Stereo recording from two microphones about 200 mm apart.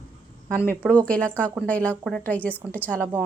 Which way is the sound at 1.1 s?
5° left (ahead or behind).